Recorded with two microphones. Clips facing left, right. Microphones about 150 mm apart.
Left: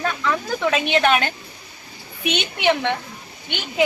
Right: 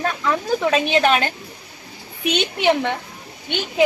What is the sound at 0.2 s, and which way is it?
A woman's voice, 30° right (ahead or behind).